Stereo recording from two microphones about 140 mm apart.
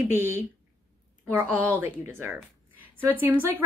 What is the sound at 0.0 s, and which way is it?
A woman's voice, 15° right (ahead or behind).